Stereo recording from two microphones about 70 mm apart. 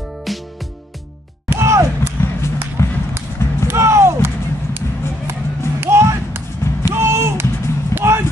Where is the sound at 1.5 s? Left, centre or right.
Right.